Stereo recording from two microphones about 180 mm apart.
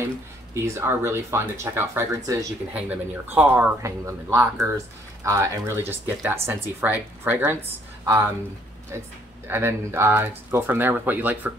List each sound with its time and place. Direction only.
0.7 s speech: 15° right (ahead or behind)